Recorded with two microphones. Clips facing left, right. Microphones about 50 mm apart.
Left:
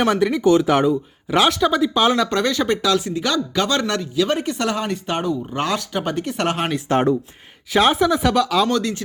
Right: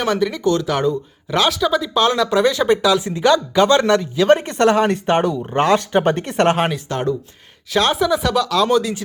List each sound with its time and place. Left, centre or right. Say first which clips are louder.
0.0 s speech: left 1 dB; centre
2.4 s speech: right 4 dB; centre
3.0 s speech: right 6 dB; right
4.4 s speech: right 7 dB; right
6.8 s speech: left 4 dB; left
7.7 s speech: left 1 dB; centre
8.7 s speech: right 4 dB; centre